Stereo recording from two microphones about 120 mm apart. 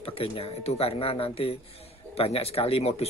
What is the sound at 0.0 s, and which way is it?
Speech, 55° left (ahead or behind).